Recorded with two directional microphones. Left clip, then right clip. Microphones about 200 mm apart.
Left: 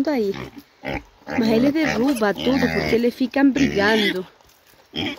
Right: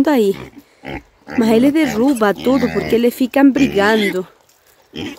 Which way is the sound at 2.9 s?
30° right (ahead or behind).